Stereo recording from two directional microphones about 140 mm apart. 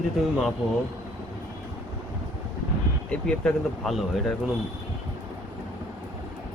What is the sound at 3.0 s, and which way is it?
Speech, 5° left (ahead or behind).